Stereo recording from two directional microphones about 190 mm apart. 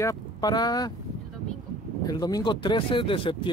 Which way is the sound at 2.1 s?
20° left (ahead or behind).